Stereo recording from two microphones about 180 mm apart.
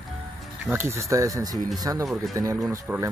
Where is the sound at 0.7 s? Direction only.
15° right (ahead or behind).